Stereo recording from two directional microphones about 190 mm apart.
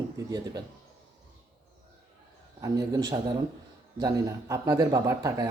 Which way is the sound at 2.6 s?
20° right (ahead or behind).